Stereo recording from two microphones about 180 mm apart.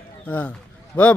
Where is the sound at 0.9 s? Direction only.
10° left (ahead or behind).